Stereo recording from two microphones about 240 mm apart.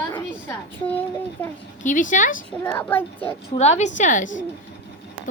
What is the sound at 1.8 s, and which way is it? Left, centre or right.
Speech, left.